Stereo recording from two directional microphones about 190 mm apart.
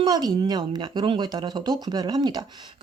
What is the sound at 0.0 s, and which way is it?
Speech, 20° right (ahead or behind).